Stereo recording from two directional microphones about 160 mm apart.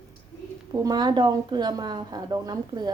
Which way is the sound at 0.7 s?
25° right (ahead or behind).